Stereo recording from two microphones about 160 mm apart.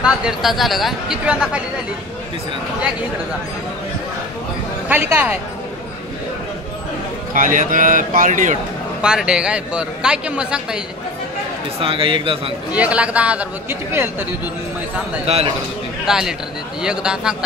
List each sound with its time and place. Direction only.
0.0 s a man's voice: centre (ahead or behind)
4.9 s speech: 10° right (ahead or behind)
7.3 s a man's voice: 55° right (ahead or behind)
9.0 s a man's voice: 5° right (ahead or behind)
11.8 s speech: 35° right (ahead or behind)
12.7 s speech: 10° right (ahead or behind)
15.2 s speech: 40° right (ahead or behind)
16.1 s a man's voice: 5° right (ahead or behind)